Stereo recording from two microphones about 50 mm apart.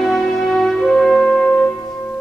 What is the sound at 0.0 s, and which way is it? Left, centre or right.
Music, centre.